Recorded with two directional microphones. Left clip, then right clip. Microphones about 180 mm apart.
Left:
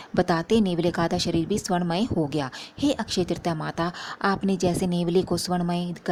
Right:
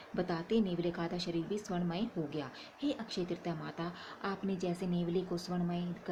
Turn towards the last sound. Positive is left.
turn(degrees=50)  # may be behind; listen again after turning